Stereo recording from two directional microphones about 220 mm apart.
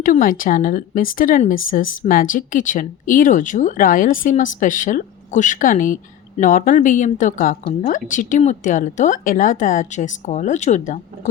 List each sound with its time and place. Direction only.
0.0 s speech: 40° left (ahead or behind)